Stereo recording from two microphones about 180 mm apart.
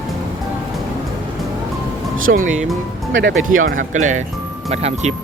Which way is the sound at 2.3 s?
45° right (ahead or behind).